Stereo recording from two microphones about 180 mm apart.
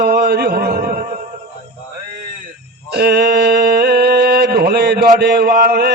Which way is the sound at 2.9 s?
65° right (ahead or behind).